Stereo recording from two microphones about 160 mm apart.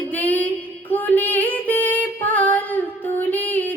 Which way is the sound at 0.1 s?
10° left (ahead or behind).